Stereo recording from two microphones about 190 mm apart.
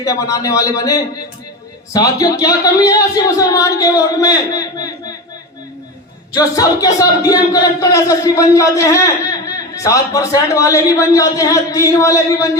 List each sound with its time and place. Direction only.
0.0 s speech: 15° left (ahead or behind)
6.3 s speech: 20° left (ahead or behind)